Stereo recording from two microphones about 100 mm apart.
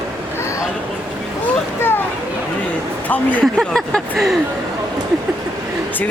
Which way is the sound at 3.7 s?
Centre (ahead or behind).